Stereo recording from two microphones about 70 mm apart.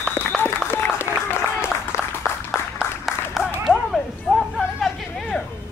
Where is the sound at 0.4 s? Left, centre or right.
Left.